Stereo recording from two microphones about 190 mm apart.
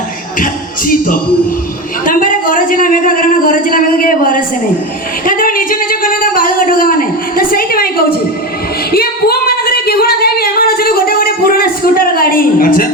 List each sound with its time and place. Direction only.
0.3 s music: 45° left (ahead or behind)
2.0 s speech: 45° left (ahead or behind)
5.2 s a sound: 45° left (ahead or behind)
8.9 s singing: 55° left (ahead or behind)